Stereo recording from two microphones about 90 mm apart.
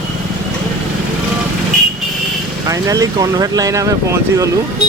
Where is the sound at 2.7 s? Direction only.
40° right (ahead or behind).